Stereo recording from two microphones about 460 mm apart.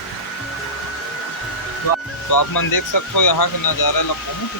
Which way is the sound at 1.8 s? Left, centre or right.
Left.